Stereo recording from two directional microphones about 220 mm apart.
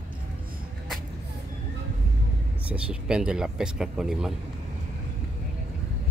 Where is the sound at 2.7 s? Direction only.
5° right (ahead or behind).